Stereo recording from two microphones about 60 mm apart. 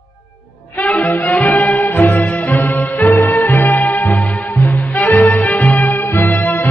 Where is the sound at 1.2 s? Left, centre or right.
Left.